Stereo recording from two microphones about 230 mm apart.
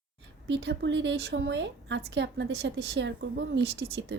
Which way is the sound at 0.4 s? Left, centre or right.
Right.